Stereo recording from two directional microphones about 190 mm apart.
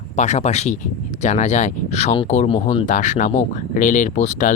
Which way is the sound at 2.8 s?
40° left (ahead or behind).